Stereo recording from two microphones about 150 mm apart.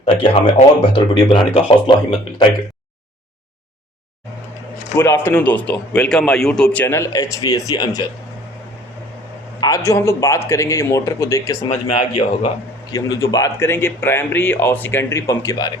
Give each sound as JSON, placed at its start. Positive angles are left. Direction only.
{"t": 0.0, "sound": "speech", "side_deg": 40}
{"t": 4.9, "sound": "a man's voice", "side_deg": 15}
{"t": 9.6, "sound": "a man's voice", "side_deg": 25}
{"t": 11.7, "sound": "a man's voice", "side_deg": 45}
{"t": 12.9, "sound": "speech", "side_deg": 20}